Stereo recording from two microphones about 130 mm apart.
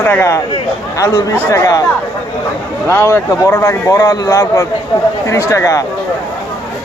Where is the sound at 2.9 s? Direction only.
20° left (ahead or behind).